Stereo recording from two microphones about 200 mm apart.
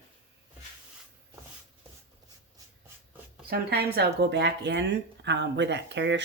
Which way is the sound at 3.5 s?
55° right (ahead or behind).